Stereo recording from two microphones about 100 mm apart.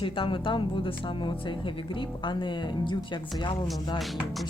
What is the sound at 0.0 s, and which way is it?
Speech, 60° left (ahead or behind).